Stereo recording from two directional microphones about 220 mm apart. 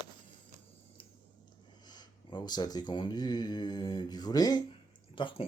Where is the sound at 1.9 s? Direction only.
20° left (ahead or behind).